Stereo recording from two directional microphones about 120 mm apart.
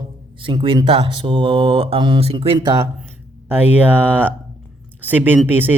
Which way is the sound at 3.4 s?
15° right (ahead or behind).